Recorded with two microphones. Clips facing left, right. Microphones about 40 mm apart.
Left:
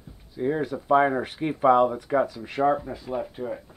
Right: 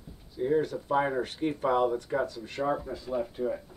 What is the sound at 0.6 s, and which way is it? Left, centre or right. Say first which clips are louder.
Speech: even; centre.